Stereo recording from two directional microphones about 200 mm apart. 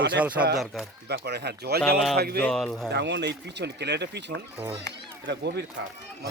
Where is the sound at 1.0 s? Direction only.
55° right (ahead or behind).